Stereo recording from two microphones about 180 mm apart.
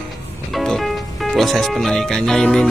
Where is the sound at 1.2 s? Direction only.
Centre (ahead or behind).